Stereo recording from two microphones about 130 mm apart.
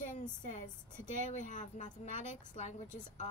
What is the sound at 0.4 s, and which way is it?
A woman's voice, 70° left (ahead or behind).